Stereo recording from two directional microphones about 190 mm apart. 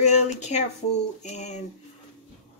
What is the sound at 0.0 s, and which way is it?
A woman's voice, 35° left (ahead or behind).